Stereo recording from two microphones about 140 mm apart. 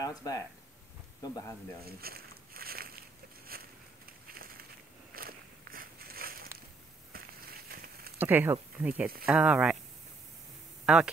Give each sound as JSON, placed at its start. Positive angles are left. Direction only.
{"t": 0.0, "sound": "speech", "side_deg": 25}
{"t": 1.9, "sound": "a sound", "side_deg": -90}
{"t": 8.2, "sound": "speech", "side_deg": -15}
{"t": 10.9, "sound": "speech", "side_deg": -5}